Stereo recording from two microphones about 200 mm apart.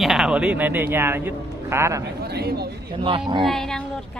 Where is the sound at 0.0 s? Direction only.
Centre (ahead or behind).